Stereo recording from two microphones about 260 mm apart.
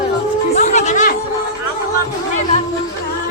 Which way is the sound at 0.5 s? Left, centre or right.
Left.